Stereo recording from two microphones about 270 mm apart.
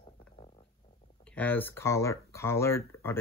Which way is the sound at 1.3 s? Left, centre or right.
Centre.